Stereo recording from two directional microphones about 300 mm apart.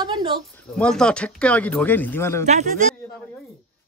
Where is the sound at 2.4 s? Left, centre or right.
Right.